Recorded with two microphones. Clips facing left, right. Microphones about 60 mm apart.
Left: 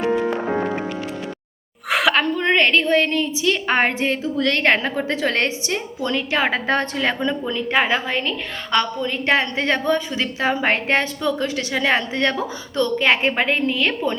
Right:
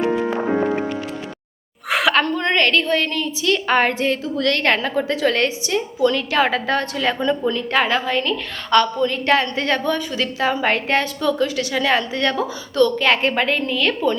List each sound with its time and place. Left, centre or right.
0.0 s music: centre
1.9 s a woman's voice: centre; by 7.3 s left
7.3 s a woman's voice: centre